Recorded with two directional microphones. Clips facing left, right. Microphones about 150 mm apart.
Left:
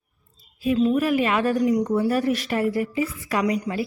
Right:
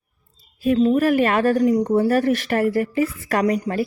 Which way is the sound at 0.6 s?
50° right (ahead or behind).